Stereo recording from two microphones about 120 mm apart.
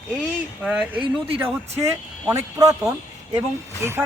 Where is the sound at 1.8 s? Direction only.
25° right (ahead or behind).